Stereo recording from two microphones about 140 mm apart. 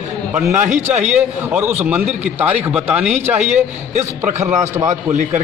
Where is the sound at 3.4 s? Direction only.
55° right (ahead or behind).